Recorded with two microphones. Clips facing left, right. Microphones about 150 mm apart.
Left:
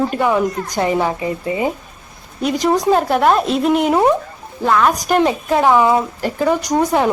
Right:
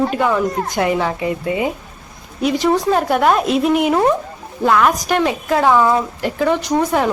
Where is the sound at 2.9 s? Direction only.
Centre (ahead or behind).